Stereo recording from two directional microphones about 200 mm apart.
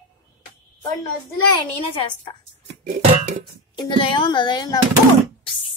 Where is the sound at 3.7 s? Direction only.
25° left (ahead or behind).